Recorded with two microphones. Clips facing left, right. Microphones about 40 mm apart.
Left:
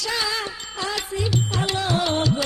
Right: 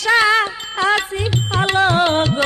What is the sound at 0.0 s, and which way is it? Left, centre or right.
Music, right.